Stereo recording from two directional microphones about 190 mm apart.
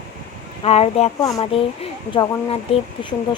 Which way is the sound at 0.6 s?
30° left (ahead or behind).